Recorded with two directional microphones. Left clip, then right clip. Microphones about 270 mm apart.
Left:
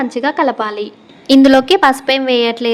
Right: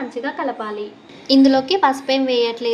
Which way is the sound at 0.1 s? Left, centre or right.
Left.